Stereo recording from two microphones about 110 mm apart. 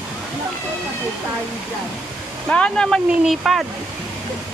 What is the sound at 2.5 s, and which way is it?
Speech, 10° left (ahead or behind).